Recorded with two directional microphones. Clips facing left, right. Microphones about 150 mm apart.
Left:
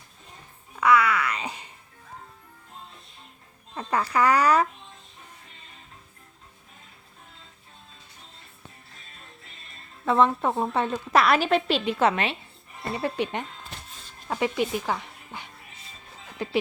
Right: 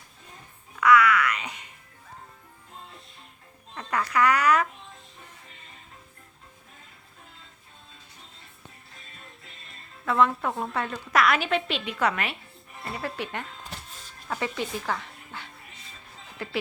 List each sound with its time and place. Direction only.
0.8 s music: 30° left (ahead or behind)
3.8 s speech: 30° left (ahead or behind)
10.1 s a woman's voice: 25° left (ahead or behind)